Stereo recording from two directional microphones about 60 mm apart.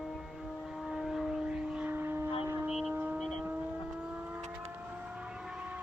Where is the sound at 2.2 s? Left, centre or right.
Right.